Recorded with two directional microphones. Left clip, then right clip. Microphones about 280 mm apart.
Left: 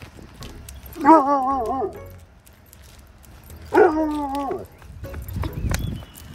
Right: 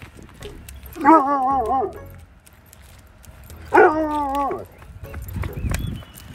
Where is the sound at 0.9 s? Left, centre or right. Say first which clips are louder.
Even; centre.